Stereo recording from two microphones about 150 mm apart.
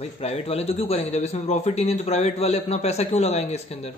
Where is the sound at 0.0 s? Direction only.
40° left (ahead or behind).